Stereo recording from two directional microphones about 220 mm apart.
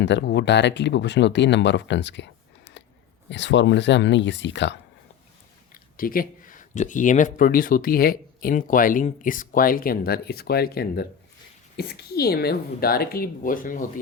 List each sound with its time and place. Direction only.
0.0 s speech: 50° left (ahead or behind)
5.7 s speech: 40° left (ahead or behind)